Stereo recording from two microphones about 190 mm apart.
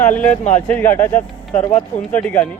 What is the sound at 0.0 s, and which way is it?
Speech, 10° left (ahead or behind).